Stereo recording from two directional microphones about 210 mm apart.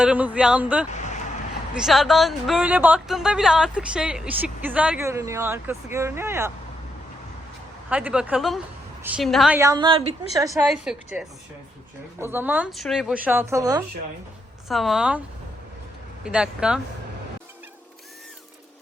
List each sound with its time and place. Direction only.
0.0 s speech: 5° right (ahead or behind)
7.9 s speech: 5° right (ahead or behind)
9.6 s a woman's voice: 20° right (ahead or behind)
10.7 s speech: 5° right (ahead or behind)
14.7 s speech: centre (ahead or behind)
16.2 s speech: 5° right (ahead or behind)